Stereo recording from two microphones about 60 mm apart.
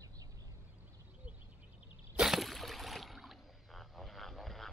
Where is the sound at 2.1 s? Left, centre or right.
Centre.